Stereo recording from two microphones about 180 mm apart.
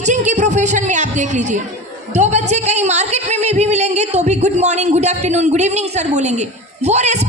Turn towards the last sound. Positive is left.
turn(degrees=-35)  # may be behind; listen again after turning